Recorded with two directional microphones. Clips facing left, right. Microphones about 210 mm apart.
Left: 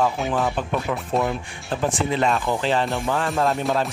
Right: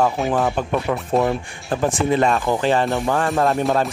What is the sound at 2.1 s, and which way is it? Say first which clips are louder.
Speech: right 4 dB; 50° right (ahead or behind).